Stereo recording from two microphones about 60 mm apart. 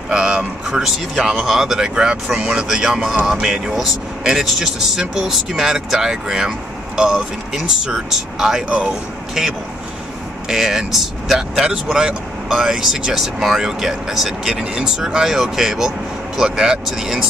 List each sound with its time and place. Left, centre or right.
0.1 s speech: centre